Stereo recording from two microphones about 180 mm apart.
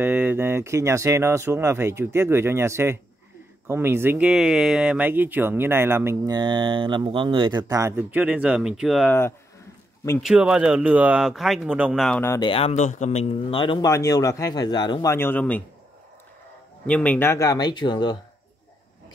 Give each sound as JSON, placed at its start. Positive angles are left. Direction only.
{"t": 0.0, "sound": "speech", "side_deg": -10}
{"t": 10.2, "sound": "speech", "side_deg": -5}
{"t": 12.2, "sound": "speech", "side_deg": 15}
{"t": 12.4, "sound": "speech", "side_deg": 30}
{"t": 16.8, "sound": "speech", "side_deg": 5}